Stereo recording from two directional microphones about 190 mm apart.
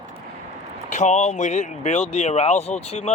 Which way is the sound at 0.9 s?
40° left (ahead or behind).